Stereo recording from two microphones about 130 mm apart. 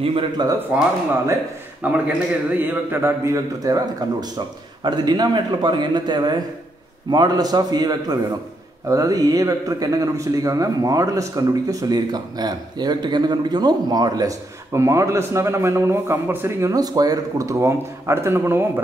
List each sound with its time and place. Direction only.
0.4 s a man's voice: 35° right (ahead or behind)
1.8 s a man's voice: 10° right (ahead or behind)
3.5 s a man's voice: 25° right (ahead or behind)